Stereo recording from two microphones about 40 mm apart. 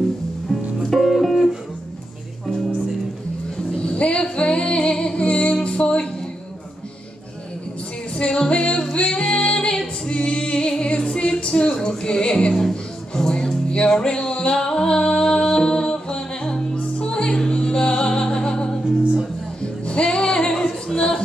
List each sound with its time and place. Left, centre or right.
0.5 s music: centre
3.5 s music: left
8.1 s music: left
20.6 s singing: left